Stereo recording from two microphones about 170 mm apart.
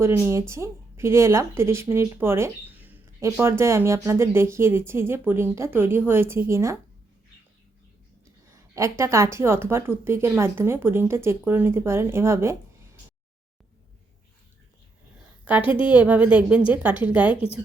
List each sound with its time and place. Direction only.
0.0 s speech: 15° right (ahead or behind)
8.7 s speech: 15° right (ahead or behind)
15.4 s a woman's voice: 10° right (ahead or behind)